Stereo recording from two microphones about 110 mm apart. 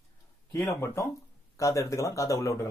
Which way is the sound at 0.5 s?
25° left (ahead or behind).